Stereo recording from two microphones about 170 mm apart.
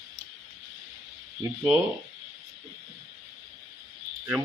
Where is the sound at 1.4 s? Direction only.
15° right (ahead or behind).